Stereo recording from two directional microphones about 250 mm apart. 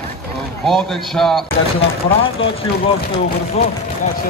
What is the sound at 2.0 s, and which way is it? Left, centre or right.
Speech, left.